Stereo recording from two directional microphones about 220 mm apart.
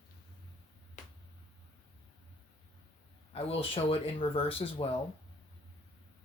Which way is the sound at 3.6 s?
25° left (ahead or behind).